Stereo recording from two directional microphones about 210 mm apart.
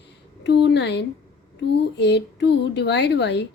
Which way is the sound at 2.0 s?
55° left (ahead or behind).